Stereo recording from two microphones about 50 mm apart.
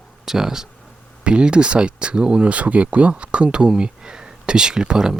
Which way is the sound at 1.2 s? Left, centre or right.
Centre.